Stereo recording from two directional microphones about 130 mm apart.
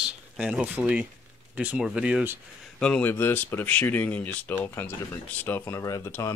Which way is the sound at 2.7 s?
10° left (ahead or behind).